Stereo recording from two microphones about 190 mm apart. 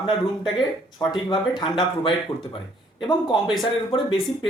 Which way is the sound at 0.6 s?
Centre (ahead or behind).